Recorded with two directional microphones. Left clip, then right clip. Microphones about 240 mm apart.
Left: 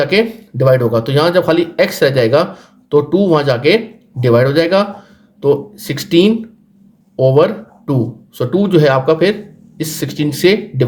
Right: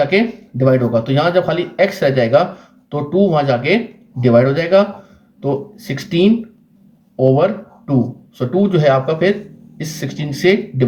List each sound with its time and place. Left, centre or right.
0.0 s speech: left